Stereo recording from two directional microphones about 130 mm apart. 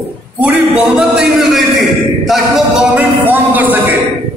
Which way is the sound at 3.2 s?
15° right (ahead or behind).